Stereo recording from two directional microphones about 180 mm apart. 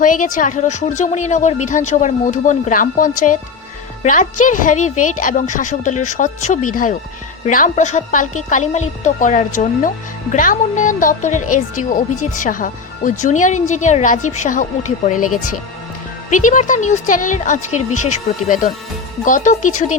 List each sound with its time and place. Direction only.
0.0 s speech: 45° left (ahead or behind)